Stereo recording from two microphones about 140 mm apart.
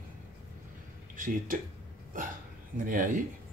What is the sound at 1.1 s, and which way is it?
Speech, 75° right (ahead or behind).